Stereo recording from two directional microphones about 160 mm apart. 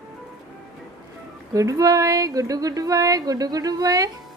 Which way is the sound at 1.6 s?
20° right (ahead or behind).